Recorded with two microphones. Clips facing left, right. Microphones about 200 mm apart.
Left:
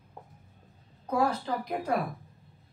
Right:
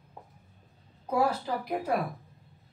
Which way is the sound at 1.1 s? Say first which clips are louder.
Even; 10° right (ahead or behind).